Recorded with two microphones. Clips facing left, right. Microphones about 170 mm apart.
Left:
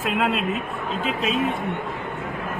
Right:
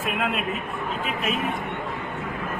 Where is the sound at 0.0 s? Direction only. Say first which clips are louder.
Left 3 dB; 90° left.